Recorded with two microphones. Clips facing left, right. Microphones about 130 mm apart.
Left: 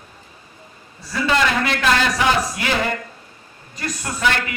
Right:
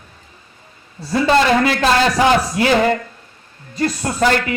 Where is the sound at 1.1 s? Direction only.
35° right (ahead or behind).